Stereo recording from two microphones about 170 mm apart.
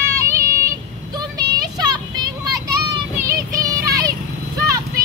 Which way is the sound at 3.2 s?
20° right (ahead or behind).